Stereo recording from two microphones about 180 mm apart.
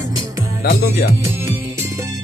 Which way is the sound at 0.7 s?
60° left (ahead or behind).